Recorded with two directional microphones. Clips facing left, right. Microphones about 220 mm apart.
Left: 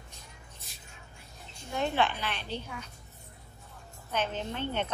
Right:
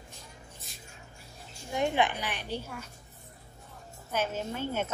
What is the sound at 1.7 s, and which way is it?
A woman's voice, 15° right (ahead or behind).